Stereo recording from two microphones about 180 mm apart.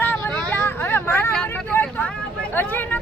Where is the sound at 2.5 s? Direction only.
10° left (ahead or behind).